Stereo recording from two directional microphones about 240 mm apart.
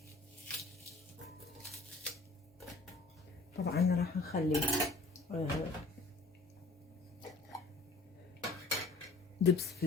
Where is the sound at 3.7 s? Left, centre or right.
Left.